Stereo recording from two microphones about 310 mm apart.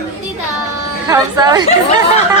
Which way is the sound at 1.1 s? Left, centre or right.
Centre.